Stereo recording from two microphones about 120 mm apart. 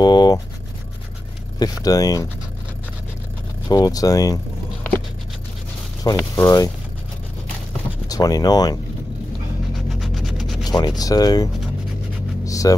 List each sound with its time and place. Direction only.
0.0 s speech: 35° left (ahead or behind)
1.6 s speech: 30° left (ahead or behind)
3.6 s speech: 35° left (ahead or behind)
6.1 s speech: 25° left (ahead or behind)
8.1 s speech: 30° left (ahead or behind)
9.9 s a sound: centre (ahead or behind)
10.6 s a sound: 35° left (ahead or behind)
11.0 s speech: 30° left (ahead or behind)
12.4 s vehicle: 30° left (ahead or behind)